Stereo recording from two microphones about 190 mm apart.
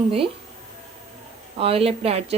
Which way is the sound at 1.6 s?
30° right (ahead or behind).